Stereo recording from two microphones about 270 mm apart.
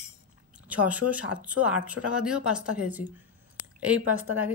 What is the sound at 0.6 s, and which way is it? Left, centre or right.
A woman's voice, centre.